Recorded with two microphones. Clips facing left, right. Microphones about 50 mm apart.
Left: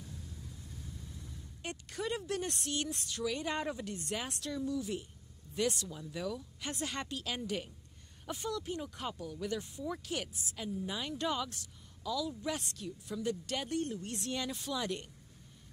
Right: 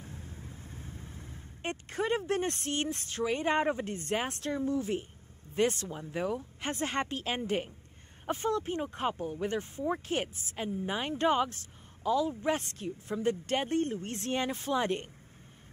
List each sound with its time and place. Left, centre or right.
0.0 s vehicle: right
5.5 s speech: right